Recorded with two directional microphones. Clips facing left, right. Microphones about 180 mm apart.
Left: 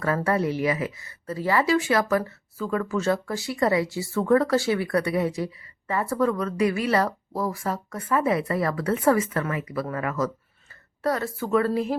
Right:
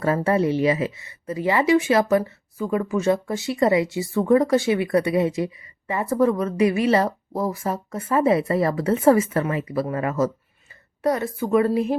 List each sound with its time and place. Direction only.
0.2 s speech: 25° right (ahead or behind)